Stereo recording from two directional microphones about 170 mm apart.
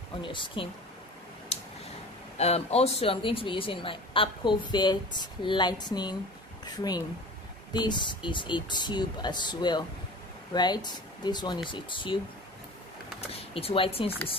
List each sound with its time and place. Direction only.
0.2 s speech: 30° left (ahead or behind)
2.3 s speech: 40° left (ahead or behind)
13.3 s speech: 35° left (ahead or behind)